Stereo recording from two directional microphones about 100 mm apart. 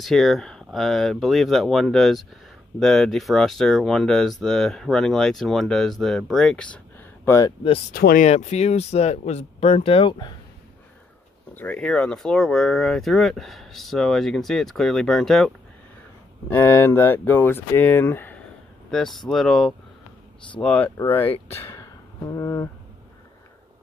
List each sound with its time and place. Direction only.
0.0 s speech: centre (ahead or behind)
8.3 s speech: 90° left; by 10.1 s 70° left (ahead or behind)
11.5 s speech: 15° left (ahead or behind)
16.4 s speech: 20° left (ahead or behind)
18.9 s speech: 5° left (ahead or behind)
20.6 s speech: 15° left (ahead or behind)
21.5 s a sound: 30° left (ahead or behind)